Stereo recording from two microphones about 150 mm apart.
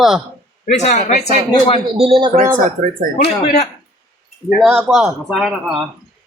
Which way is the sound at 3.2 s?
80° left.